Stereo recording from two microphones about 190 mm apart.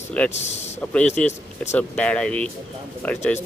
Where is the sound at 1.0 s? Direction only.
40° left (ahead or behind).